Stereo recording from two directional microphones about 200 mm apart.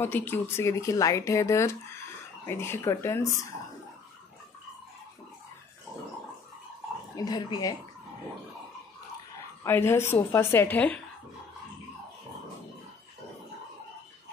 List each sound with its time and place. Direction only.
0.0 s speech: 10° left (ahead or behind)
7.2 s speech: 20° left (ahead or behind)
9.6 s speech: 10° left (ahead or behind)